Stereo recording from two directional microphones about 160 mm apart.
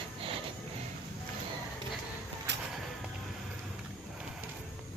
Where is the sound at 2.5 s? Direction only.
90° right.